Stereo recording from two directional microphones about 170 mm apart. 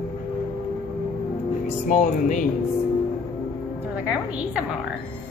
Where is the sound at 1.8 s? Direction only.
45° left (ahead or behind).